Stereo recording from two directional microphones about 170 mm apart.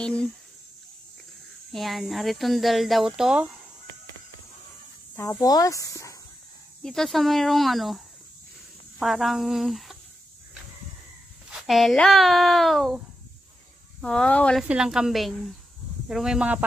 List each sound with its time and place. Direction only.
0.0 s speech: 5° left (ahead or behind)
1.7 s speech: centre (ahead or behind)
5.1 s speech: 15° left (ahead or behind)
6.8 s speech: 5° left (ahead or behind)
9.0 s speech: centre (ahead or behind)
11.5 s speech: centre (ahead or behind)
14.0 s speech: 5° left (ahead or behind)
14.6 s speech: 5° right (ahead or behind)